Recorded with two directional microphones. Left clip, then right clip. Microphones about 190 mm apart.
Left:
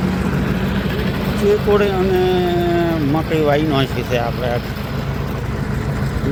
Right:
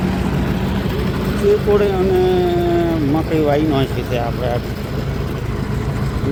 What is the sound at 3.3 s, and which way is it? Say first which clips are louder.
Speech: left 1 dB; 5° right (ahead or behind).